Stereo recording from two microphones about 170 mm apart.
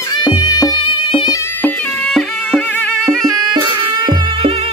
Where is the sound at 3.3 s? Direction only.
25° right (ahead or behind).